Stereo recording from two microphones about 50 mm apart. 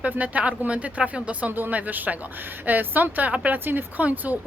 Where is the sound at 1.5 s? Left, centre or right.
Right.